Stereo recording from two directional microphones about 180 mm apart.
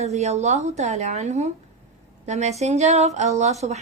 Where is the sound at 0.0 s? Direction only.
40° right (ahead or behind).